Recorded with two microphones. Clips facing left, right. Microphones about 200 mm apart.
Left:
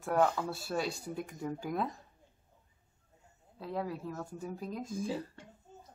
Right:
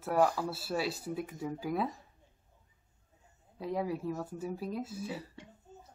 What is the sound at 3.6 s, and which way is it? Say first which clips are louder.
Speech: right 3 dB; 10° right (ahead or behind).